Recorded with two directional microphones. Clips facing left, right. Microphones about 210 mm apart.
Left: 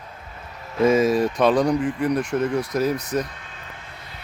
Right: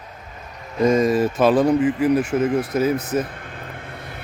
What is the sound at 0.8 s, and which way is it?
Speech, 5° left (ahead or behind).